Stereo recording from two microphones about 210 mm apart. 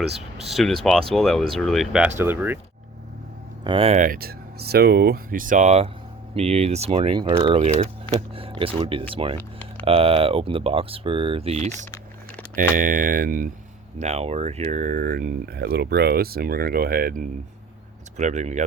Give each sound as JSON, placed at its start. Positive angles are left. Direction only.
{"t": 0.1, "sound": "speech", "side_deg": -30}
{"t": 0.5, "sound": "speech", "side_deg": 0}
{"t": 3.6, "sound": "speech", "side_deg": -25}
{"t": 14.0, "sound": "speech", "side_deg": -30}
{"t": 18.2, "sound": "speech", "side_deg": -35}